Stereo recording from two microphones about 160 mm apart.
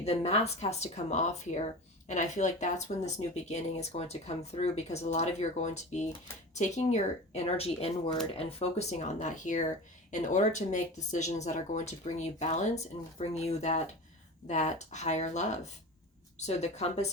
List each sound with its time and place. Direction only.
0.0 s speech: 40° left (ahead or behind)